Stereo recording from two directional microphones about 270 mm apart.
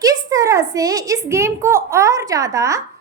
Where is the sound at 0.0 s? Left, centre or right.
Centre.